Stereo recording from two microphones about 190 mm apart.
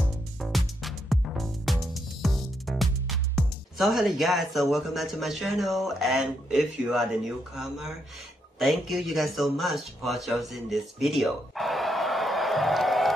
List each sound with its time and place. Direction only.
0.4 s music: centre (ahead or behind)
2.2 s speech: centre (ahead or behind)
10.0 s a sound: centre (ahead or behind)